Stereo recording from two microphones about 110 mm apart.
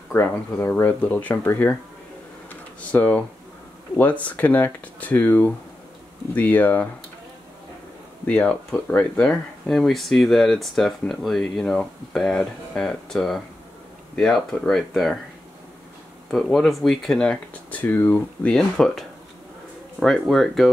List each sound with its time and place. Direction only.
0.3 s speech: 15° left (ahead or behind)
2.5 s a sound: 15° left (ahead or behind)
4.0 s speech: 15° left (ahead or behind)
8.3 s speech: 10° left (ahead or behind)
16.3 s speech: centre (ahead or behind)